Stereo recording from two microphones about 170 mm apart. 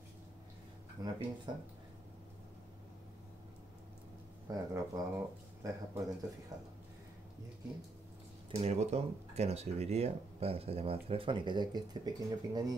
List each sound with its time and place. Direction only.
1.0 s speech: 25° right (ahead or behind)
4.5 s speech: 20° right (ahead or behind)
8.5 s speech: 40° right (ahead or behind)